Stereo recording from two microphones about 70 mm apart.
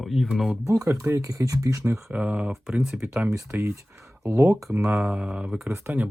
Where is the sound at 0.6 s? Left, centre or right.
Right.